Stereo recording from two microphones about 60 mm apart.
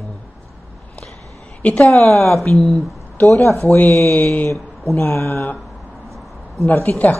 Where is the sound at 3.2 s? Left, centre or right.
Left.